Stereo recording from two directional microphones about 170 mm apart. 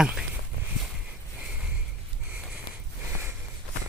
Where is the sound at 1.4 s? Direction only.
5° right (ahead or behind).